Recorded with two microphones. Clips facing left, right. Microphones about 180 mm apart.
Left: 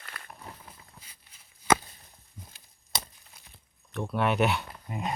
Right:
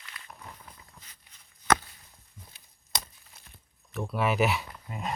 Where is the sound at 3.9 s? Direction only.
Centre (ahead or behind).